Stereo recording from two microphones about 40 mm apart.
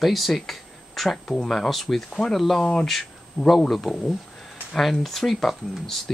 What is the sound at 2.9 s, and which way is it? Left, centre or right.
Speech, centre.